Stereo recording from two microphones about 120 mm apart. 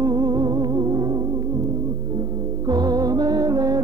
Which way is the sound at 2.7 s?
30° right (ahead or behind).